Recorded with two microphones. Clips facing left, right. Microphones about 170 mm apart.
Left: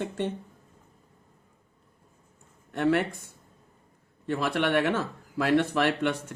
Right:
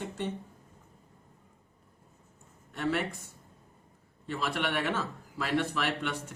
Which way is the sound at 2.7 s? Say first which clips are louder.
Left 7 dB; 60° left (ahead or behind).